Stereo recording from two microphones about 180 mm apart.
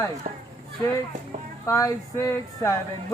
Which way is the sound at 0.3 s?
45° right (ahead or behind).